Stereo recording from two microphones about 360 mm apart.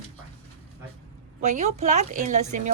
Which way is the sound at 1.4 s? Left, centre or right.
Centre.